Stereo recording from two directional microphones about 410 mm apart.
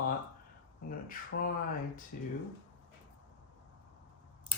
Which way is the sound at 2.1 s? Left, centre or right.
Left.